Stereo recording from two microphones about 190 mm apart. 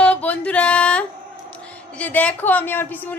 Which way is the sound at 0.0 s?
5° left (ahead or behind).